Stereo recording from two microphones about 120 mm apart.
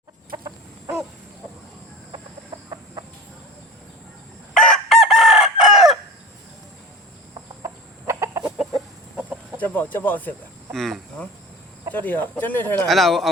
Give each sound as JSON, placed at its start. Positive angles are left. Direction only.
{"t": 4.5, "sound": "chicken", "side_deg": 5}
{"t": 7.3, "sound": "chicken", "side_deg": -25}
{"t": 8.4, "sound": "chicken", "side_deg": -5}
{"t": 9.6, "sound": "speech", "side_deg": 15}
{"t": 10.7, "sound": "speech", "side_deg": 0}
{"t": 11.9, "sound": "speech", "side_deg": 15}
{"t": 12.9, "sound": "speech", "side_deg": 0}